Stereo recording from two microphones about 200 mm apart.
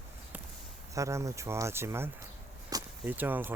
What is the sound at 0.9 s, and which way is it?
Speech, 15° right (ahead or behind).